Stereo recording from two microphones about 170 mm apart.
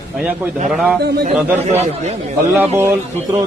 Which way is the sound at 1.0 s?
80° right.